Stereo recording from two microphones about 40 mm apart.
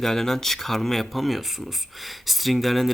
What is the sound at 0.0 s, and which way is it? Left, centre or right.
Speech, centre.